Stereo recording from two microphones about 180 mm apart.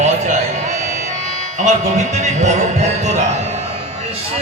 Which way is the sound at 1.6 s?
40° right (ahead or behind).